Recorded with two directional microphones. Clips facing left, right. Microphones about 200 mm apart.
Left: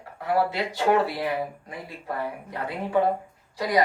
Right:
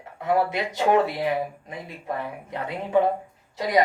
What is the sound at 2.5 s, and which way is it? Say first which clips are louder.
Speech: right 3 dB; 20° right (ahead or behind).